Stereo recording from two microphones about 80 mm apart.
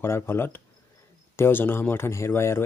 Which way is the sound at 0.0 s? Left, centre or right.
Left.